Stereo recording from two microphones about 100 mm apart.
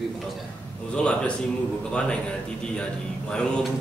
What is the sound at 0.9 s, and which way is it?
Speech, 10° left (ahead or behind).